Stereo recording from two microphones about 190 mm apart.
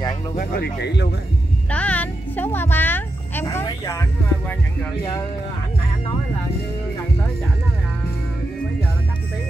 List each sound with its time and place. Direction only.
0.4 s speech: 55° left (ahead or behind)
1.7 s music: 5° left (ahead or behind)
3.6 s speech: 15° left (ahead or behind)